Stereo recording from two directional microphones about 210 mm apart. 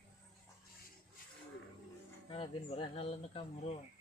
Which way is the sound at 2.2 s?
25° left (ahead or behind).